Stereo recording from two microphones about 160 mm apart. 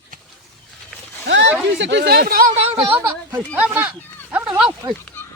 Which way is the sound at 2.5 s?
35° right (ahead or behind).